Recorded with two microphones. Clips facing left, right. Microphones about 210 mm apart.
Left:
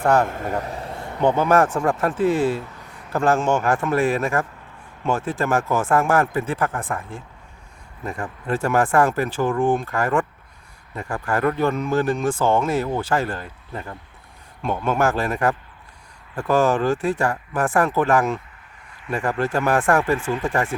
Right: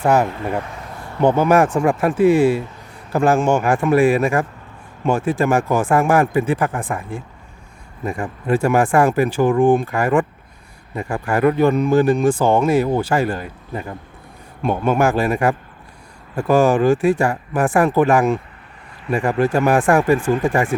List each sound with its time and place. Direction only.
0.0 s speech: 5° right (ahead or behind)
0.6 s a sound: 35° left (ahead or behind)
1.4 s speech: 10° right (ahead or behind)
20.1 s speech: 50° right (ahead or behind)
20.4 s speech: 15° right (ahead or behind)